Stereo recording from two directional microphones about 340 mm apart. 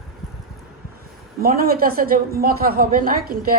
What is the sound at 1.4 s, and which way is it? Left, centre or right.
A woman's voice, right.